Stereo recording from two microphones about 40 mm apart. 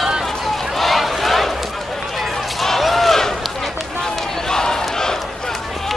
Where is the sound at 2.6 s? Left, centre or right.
Centre.